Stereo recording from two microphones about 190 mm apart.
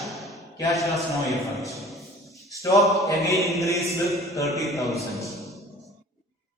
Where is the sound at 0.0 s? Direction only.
Centre (ahead or behind).